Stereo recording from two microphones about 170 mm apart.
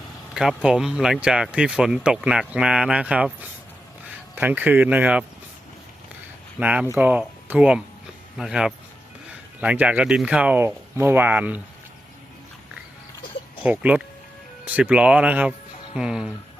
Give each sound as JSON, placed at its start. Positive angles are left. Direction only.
{"t": 0.3, "sound": "speech", "side_deg": -5}
{"t": 6.6, "sound": "speech", "side_deg": -10}
{"t": 13.6, "sound": "speech", "side_deg": -10}